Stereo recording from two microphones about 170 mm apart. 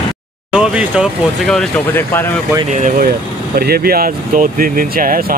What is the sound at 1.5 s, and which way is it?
Speech, 10° left (ahead or behind).